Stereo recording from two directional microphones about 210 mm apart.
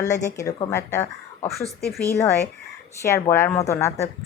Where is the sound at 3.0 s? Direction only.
10° left (ahead or behind).